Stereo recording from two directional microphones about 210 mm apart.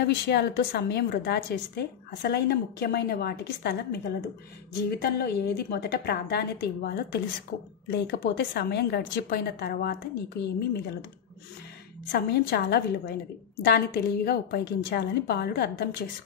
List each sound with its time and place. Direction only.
0.0 s a woman's voice: 50° left (ahead or behind)
5.0 s a woman's voice: 50° left (ahead or behind)
12.1 s a woman's voice: 50° left (ahead or behind)